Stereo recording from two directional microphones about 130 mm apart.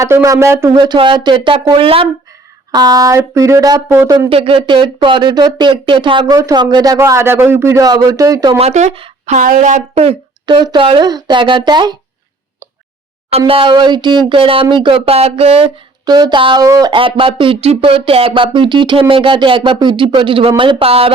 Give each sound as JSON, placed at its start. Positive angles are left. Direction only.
{"t": 0.0, "sound": "a man's voice", "side_deg": -25}
{"t": 0.8, "sound": "speech", "side_deg": -40}
{"t": 2.7, "sound": "a man's voice", "side_deg": -30}
{"t": 4.3, "sound": "speech", "side_deg": -45}
{"t": 6.3, "sound": "a man's voice", "side_deg": -25}
{"t": 8.5, "sound": "speech", "side_deg": -60}
{"t": 10.4, "sound": "speech", "side_deg": -35}
{"t": 13.5, "sound": "speech", "side_deg": -45}
{"t": 16.0, "sound": "a man's voice", "side_deg": -30}
{"t": 16.9, "sound": "speech", "side_deg": -40}